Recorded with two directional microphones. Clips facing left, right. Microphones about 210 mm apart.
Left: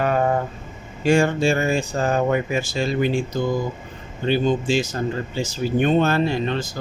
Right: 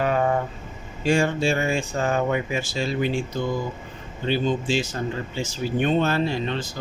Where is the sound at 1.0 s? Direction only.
50° left (ahead or behind).